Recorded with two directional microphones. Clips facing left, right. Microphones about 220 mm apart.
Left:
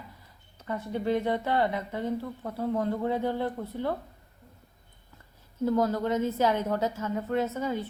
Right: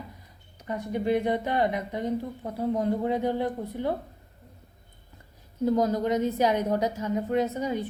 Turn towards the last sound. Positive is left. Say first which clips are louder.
# right 2 dB
turn(degrees=-15)  # may be behind; listen again after turning